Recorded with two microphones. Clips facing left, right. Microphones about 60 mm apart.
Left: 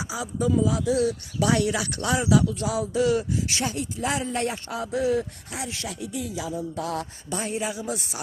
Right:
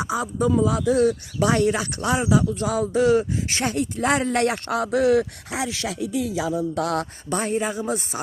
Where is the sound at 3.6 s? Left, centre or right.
Right.